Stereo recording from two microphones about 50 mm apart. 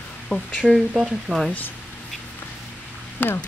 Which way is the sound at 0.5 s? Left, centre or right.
Centre.